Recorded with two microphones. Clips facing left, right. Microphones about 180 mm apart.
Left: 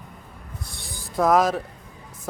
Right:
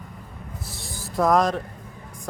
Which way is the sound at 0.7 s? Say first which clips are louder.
Right 3 dB; centre (ahead or behind).